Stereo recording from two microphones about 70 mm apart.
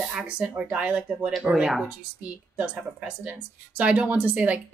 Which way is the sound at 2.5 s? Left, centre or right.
Centre.